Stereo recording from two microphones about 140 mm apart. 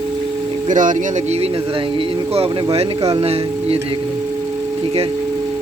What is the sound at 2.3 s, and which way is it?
Speech, 45° right (ahead or behind).